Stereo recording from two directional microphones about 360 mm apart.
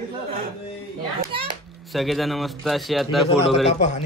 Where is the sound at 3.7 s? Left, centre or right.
Centre.